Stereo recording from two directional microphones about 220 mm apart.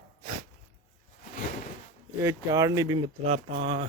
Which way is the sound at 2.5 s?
15° right (ahead or behind).